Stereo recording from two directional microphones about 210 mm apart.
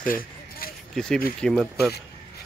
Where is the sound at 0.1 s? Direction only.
45° left (ahead or behind).